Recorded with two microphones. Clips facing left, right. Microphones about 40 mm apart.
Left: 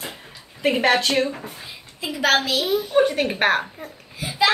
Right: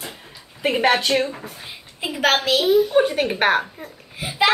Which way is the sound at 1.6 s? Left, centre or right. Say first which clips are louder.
Right 2 dB; right.